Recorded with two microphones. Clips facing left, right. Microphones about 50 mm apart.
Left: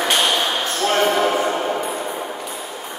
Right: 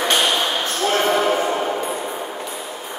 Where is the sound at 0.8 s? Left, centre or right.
Centre.